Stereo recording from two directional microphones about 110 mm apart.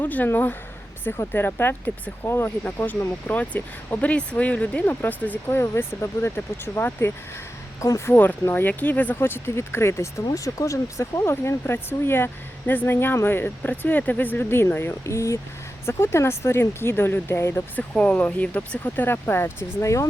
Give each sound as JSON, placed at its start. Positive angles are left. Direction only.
{"t": 0.0, "sound": "speech", "side_deg": 15}
{"t": 17.9, "sound": "speech", "side_deg": 10}